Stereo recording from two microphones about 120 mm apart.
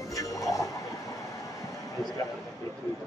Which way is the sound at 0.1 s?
30° left (ahead or behind).